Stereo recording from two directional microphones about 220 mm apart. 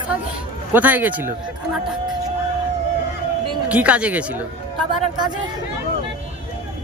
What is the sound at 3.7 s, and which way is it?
Speech, 5° right (ahead or behind).